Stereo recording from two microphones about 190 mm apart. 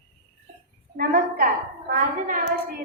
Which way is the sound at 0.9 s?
50° right (ahead or behind).